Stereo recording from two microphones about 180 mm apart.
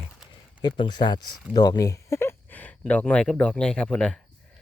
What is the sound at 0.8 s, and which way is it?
Speech, 25° left (ahead or behind).